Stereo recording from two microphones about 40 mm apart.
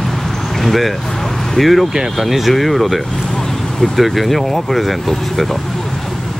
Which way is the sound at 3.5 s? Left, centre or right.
Centre.